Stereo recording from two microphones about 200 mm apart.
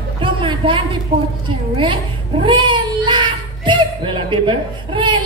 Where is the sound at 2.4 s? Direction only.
25° right (ahead or behind).